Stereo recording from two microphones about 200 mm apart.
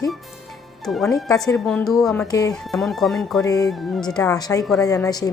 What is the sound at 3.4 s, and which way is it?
Speech, 15° left (ahead or behind).